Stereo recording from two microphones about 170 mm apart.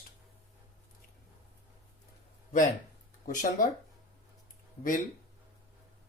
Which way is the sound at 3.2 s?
50° left (ahead or behind).